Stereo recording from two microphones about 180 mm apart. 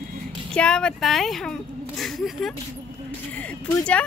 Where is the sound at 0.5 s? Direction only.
5° left (ahead or behind).